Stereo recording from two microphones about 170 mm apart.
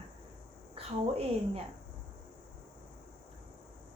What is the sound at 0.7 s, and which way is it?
Speech, 35° right (ahead or behind).